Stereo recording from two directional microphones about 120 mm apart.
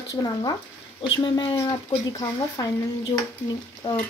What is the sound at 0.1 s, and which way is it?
Speech, 30° left (ahead or behind).